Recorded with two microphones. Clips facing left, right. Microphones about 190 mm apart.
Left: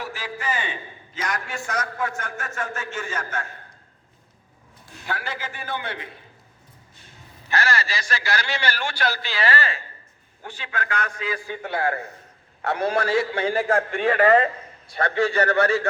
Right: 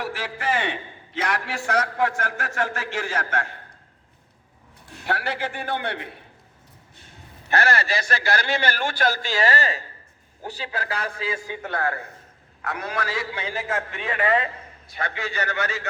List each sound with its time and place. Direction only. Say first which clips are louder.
0.0 s a man's voice: right 3 dB; 75° right (ahead or behind)
5.0 s a man's voice: right 4 dB; 65° right (ahead or behind)
7.5 s a man's voice: right 3 dB; 60° right (ahead or behind); by 11.5 s 25° right (ahead or behind)
12.6 s a man's voice: left 6 dB; 30° left (ahead or behind)
13.1 s a man's voice: left 8 dB; 55° left (ahead or behind)
14.1 s speech: left 5 dB; 40° left (ahead or behind)
15.0 s a man's voice: left 8 dB; 30° left (ahead or behind)